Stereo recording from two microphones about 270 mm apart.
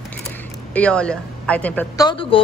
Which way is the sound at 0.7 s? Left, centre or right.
Centre.